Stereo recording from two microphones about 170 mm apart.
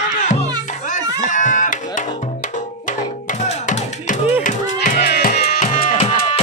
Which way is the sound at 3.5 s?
50° left (ahead or behind).